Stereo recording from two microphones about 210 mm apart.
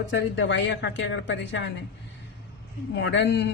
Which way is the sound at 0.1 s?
60° left (ahead or behind).